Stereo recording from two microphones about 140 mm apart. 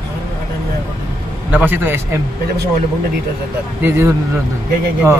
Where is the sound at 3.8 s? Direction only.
20° right (ahead or behind).